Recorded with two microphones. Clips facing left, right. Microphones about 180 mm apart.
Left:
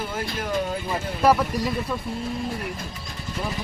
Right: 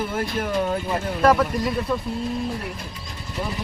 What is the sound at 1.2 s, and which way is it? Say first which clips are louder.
Speech: right 1 dB; 5° left (ahead or behind).